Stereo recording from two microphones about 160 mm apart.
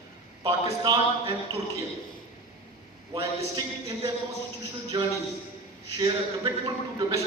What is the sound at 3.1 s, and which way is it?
Speech, 20° right (ahead or behind).